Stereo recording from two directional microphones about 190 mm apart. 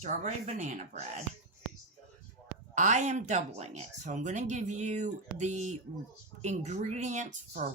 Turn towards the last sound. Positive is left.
turn(degrees=-40)  # may be behind; listen again after turning